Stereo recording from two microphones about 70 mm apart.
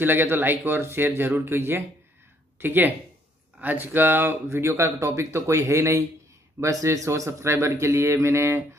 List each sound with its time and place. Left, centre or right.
0.0 s speech: right